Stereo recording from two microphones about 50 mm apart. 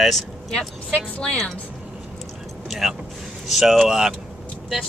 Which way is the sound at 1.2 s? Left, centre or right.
Centre.